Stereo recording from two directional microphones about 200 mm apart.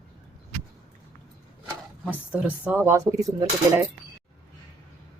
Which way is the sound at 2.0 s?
10° right (ahead or behind).